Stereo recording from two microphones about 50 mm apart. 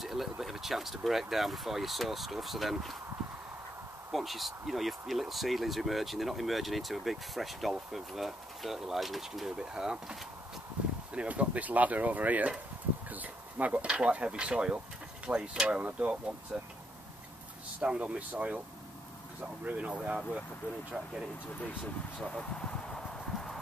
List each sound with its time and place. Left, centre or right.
0.0 s speech: centre
4.1 s speech: centre
9.6 s speech: centre
11.1 s speech: right
17.8 s speech: right
19.6 s speech: right
22.2 s speech: centre
23.3 s clip-clop: centre